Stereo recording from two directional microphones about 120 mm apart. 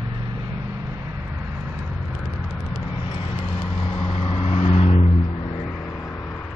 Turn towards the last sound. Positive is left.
turn(degrees=65)  # may be behind; listen again after turning